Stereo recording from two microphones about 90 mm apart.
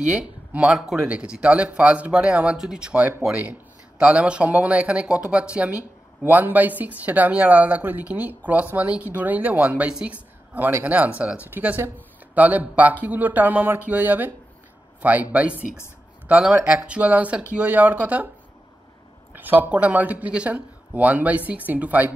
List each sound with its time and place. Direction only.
0.0 s speech: 15° right (ahead or behind)
19.3 s speech: 20° right (ahead or behind)